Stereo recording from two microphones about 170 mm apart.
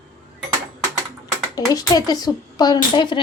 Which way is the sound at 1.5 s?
20° left (ahead or behind).